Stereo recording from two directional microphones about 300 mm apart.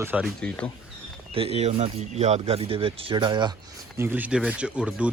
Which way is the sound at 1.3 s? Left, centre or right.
Centre.